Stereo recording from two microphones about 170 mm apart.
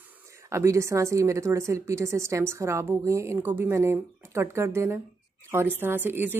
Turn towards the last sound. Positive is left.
turn(degrees=-10)  # may be behind; listen again after turning